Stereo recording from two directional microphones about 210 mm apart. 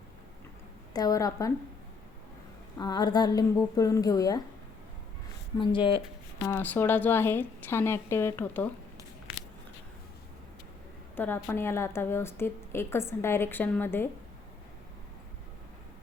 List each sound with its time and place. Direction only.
0.9 s a woman's voice: 15° left (ahead or behind)
2.7 s a woman's voice: 20° left (ahead or behind)
5.5 s speech: 25° left (ahead or behind)
6.4 s a woman's voice: 10° left (ahead or behind)
11.2 s a woman's voice: 10° left (ahead or behind)